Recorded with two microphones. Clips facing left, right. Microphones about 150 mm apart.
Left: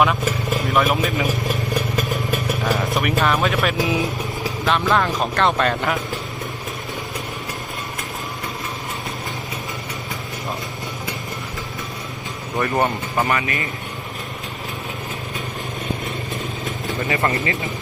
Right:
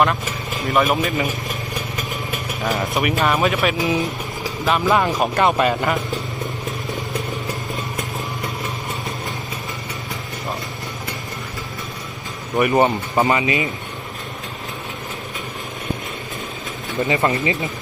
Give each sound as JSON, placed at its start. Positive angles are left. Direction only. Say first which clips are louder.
{"t": 0.7, "sound": "speech", "louder": "right 2 dB", "side_deg": 0}
{"t": 2.0, "sound": "vehicle", "louder": "left 4 dB", "side_deg": 0}
{"t": 2.8, "sound": "a man's voice", "louder": "even", "side_deg": 0}
{"t": 12.5, "sound": "speech", "louder": "right 4 dB", "side_deg": -15}
{"t": 17.1, "sound": "speech", "louder": "right 2 dB", "side_deg": -20}